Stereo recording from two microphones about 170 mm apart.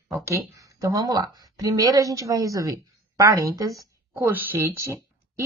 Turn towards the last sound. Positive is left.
turn(degrees=-15)  # may be behind; listen again after turning